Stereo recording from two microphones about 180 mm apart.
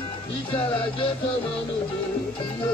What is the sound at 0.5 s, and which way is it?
Speech, 30° left (ahead or behind).